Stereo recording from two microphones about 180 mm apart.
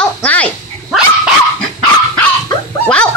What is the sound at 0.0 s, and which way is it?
Dog, 5° left (ahead or behind).